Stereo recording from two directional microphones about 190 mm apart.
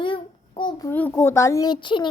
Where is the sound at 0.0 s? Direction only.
25° left (ahead or behind).